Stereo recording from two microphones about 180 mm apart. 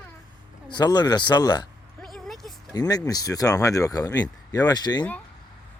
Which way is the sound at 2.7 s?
20° left (ahead or behind).